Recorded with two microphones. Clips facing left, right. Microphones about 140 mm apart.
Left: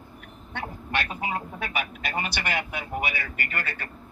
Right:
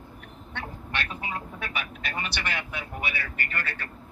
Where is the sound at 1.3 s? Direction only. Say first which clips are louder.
Left 4 dB; 50° left (ahead or behind).